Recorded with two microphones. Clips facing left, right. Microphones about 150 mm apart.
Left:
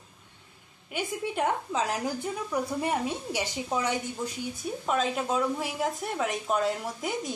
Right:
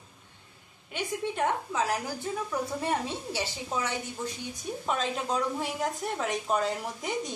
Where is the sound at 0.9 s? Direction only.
10° left (ahead or behind).